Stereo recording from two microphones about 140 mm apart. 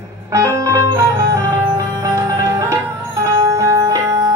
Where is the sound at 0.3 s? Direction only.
20° right (ahead or behind).